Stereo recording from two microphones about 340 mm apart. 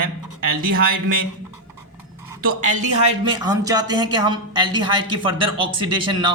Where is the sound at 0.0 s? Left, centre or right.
Right.